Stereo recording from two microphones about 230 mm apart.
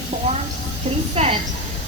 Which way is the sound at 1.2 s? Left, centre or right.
Right.